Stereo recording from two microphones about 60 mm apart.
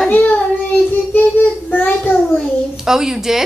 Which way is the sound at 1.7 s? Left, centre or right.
Left.